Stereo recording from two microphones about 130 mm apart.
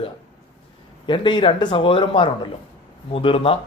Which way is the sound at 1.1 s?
40° left (ahead or behind).